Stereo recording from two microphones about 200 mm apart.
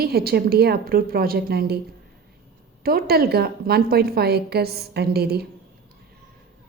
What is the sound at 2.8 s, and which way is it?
A woman's voice, 50° right (ahead or behind).